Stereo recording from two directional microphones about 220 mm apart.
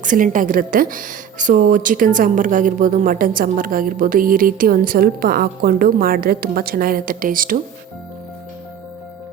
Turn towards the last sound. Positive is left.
turn(degrees=-40)  # may be behind; listen again after turning